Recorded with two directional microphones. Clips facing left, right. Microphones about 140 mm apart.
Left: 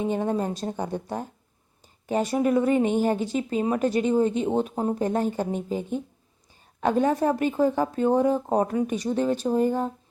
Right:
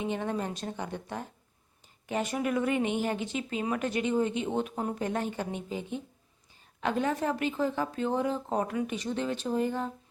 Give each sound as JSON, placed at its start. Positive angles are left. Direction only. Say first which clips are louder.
{"t": 0.0, "sound": "a woman's voice", "louder": "left 6 dB", "side_deg": 40}